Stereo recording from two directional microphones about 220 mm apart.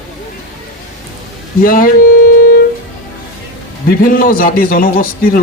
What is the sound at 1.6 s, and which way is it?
Speech, 40° left (ahead or behind).